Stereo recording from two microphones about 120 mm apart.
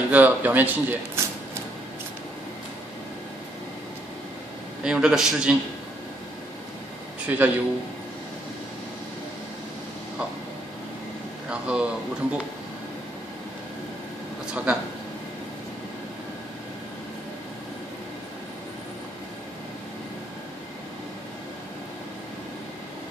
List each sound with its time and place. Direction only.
0.1 s speech: 15° right (ahead or behind)
4.8 s a man's voice: 5° right (ahead or behind)
7.2 s speech: 15° right (ahead or behind)
11.6 s speech: 10° right (ahead or behind)
14.5 s speech: 10° right (ahead or behind)